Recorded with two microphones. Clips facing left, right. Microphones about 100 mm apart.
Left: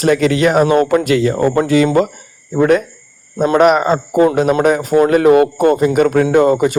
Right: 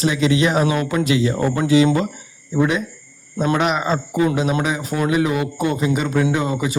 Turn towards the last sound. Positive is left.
turn(degrees=55)  # may be behind; listen again after turning